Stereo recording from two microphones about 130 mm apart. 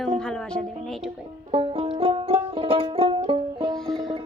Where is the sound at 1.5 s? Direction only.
50° right (ahead or behind).